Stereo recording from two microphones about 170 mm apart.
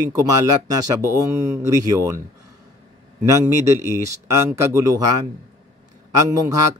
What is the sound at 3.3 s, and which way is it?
Speech, 15° right (ahead or behind).